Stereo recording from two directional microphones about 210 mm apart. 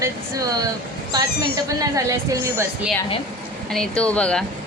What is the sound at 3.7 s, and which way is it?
Speech, 5° left (ahead or behind).